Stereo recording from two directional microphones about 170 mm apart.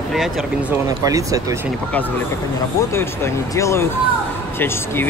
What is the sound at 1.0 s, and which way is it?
Speech, 20° right (ahead or behind).